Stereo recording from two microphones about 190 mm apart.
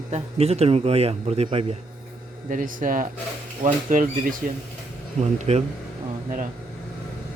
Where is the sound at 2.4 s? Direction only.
45° right (ahead or behind).